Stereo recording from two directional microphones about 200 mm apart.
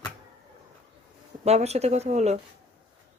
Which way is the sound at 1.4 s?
30° right (ahead or behind).